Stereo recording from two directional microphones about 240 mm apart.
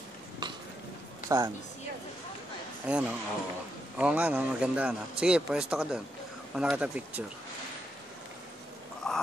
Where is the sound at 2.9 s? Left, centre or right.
Centre.